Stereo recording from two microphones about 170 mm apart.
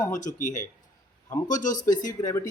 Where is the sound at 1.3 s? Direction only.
20° left (ahead or behind).